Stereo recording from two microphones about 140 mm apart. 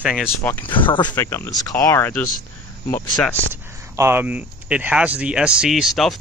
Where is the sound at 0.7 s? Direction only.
35° left (ahead or behind).